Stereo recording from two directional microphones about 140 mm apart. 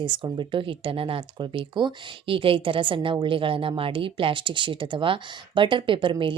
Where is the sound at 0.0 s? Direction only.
35° right (ahead or behind).